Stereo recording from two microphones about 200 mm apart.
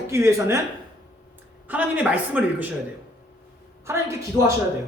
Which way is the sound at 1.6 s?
5° right (ahead or behind).